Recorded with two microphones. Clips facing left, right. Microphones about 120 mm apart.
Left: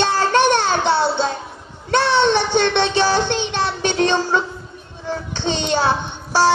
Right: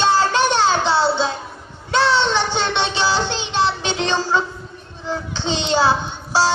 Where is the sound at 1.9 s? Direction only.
55° left (ahead or behind).